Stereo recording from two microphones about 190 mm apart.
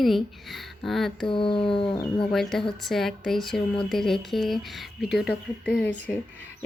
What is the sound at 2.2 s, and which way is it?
Speech, centre (ahead or behind).